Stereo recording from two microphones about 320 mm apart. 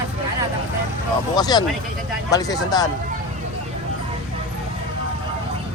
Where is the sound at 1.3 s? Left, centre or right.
Centre.